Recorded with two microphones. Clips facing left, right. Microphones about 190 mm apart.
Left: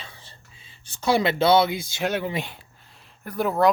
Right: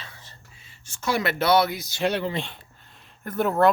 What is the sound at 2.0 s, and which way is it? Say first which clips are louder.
Speech: right 2 dB; centre (ahead or behind).